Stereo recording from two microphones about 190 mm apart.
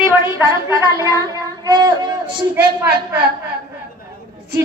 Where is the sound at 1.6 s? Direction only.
25° right (ahead or behind).